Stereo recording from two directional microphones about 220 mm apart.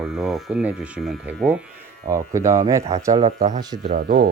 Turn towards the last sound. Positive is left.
turn(degrees=-35)  # may be behind; listen again after turning